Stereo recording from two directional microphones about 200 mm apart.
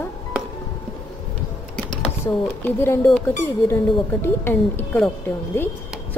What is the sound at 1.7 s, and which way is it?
Speech, 5° left (ahead or behind).